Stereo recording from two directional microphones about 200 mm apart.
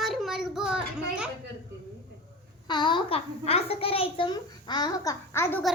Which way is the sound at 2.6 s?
20° left (ahead or behind).